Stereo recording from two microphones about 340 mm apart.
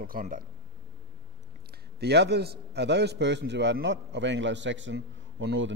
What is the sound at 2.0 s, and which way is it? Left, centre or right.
A man's voice, right.